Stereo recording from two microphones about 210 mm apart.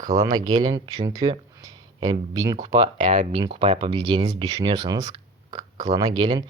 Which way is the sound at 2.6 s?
35° right (ahead or behind).